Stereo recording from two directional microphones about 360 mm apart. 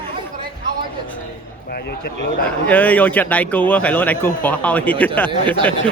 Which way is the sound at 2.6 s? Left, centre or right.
Centre.